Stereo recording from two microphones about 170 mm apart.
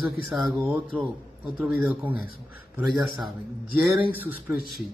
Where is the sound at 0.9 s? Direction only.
30° right (ahead or behind).